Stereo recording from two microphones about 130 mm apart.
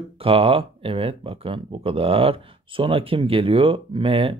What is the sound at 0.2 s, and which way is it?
Speech, 50° right (ahead or behind).